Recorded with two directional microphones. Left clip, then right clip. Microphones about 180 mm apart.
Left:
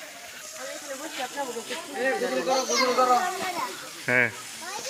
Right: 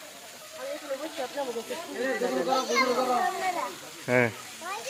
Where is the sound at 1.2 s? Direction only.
65° right (ahead or behind).